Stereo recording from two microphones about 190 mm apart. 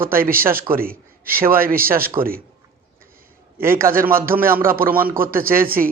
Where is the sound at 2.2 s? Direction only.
30° right (ahead or behind).